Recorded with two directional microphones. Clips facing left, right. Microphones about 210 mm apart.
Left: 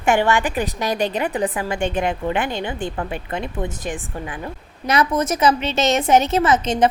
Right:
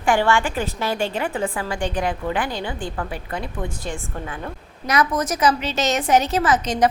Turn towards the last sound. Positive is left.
turn(degrees=25)  # may be behind; listen again after turning